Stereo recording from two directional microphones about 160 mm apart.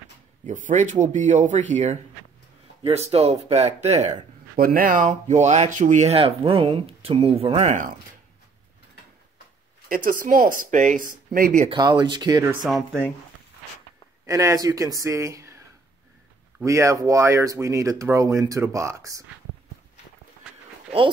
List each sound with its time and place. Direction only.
0.5 s speech: 50° right (ahead or behind)
2.8 s speech: 40° right (ahead or behind)
4.6 s speech: 65° right (ahead or behind); by 7.9 s 50° right (ahead or behind)
9.8 s speech: 60° right (ahead or behind)
11.7 s speech: 30° right (ahead or behind)
12.6 s speech: centre (ahead or behind)
14.2 s speech: 20° right (ahead or behind)
16.6 s speech: 20° right (ahead or behind)